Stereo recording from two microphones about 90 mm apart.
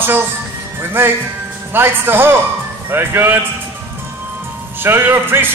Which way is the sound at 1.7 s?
25° right (ahead or behind).